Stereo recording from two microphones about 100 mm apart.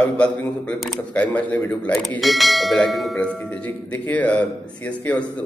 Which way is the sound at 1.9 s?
Centre (ahead or behind).